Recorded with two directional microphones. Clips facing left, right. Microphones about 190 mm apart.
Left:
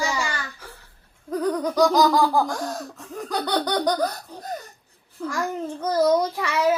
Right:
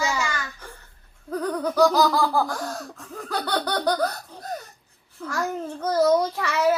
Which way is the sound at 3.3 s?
15° left (ahead or behind).